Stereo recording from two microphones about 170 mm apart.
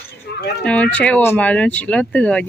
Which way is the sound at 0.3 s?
70° left (ahead or behind).